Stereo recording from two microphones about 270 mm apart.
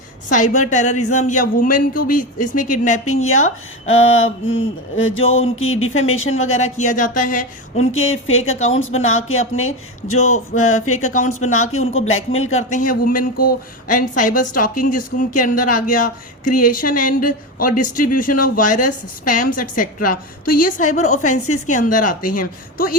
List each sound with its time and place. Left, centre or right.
0.3 s a woman's voice: left
3.1 s speech: left
6.7 s speech: left
7.9 s speech: left
12.7 s a woman's voice: left
21.2 s a woman's voice: left
21.7 s a woman's voice: left